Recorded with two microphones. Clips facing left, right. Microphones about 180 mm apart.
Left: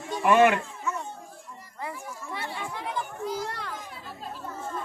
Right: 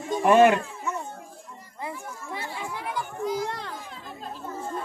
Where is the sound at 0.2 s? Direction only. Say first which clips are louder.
Right 2 dB; 35° right (ahead or behind).